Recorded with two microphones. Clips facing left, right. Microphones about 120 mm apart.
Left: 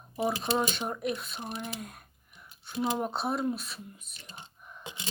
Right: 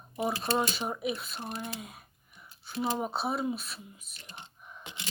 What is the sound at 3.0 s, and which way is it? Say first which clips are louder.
Speech: left 1 dB; centre (ahead or behind).